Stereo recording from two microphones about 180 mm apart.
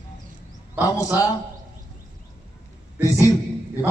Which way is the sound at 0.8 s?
20° left (ahead or behind).